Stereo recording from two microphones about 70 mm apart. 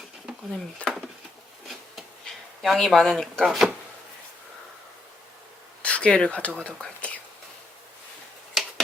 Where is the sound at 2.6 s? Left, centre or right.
Centre.